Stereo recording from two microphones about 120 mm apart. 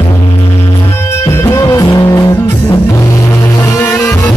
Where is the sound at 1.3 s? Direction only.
20° left (ahead or behind).